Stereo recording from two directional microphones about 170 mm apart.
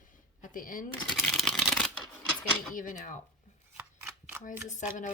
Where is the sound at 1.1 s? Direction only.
Centre (ahead or behind).